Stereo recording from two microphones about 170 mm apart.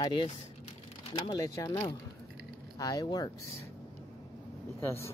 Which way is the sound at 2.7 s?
20° left (ahead or behind).